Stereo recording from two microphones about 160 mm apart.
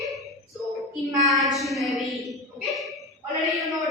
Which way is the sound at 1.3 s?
Centre (ahead or behind).